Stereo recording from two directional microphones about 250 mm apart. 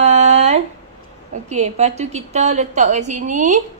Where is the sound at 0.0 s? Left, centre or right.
Right.